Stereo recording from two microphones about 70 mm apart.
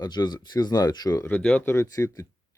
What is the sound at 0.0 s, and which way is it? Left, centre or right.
Speech, left.